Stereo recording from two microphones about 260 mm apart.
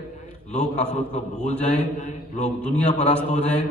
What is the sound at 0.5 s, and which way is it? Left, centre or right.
Speech, left.